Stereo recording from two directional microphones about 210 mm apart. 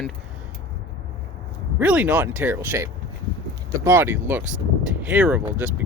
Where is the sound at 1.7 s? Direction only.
5° right (ahead or behind).